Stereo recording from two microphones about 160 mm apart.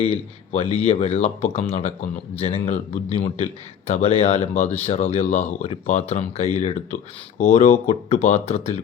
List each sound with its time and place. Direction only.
0.0 s speech: 40° left (ahead or behind)